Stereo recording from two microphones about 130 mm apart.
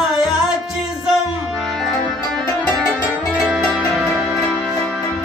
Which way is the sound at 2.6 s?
Centre (ahead or behind).